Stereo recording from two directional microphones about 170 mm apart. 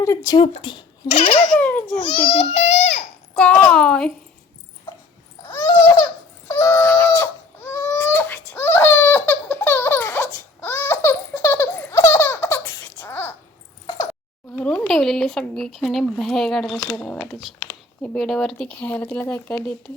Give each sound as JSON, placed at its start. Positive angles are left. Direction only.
{"t": 0.0, "sound": "speech", "side_deg": 20}
{"t": 0.4, "sound": "a child's voice", "side_deg": 30}
{"t": 1.5, "sound": "speech", "side_deg": 10}
{"t": 2.4, "sound": "a child's voice", "side_deg": 40}
{"t": 3.3, "sound": "speech", "side_deg": 10}
{"t": 5.5, "sound": "babbling", "side_deg": 20}
{"t": 6.5, "sound": "crying", "side_deg": 15}
{"t": 14.5, "sound": "speech", "side_deg": 5}